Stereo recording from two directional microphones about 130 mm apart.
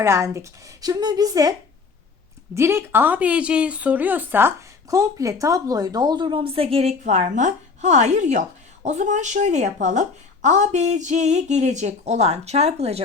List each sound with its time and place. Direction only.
0.0 s speech: 20° right (ahead or behind)
2.6 s speech: 20° right (ahead or behind); by 6.9 s 50° right (ahead or behind)
7.0 s speech: 65° right (ahead or behind)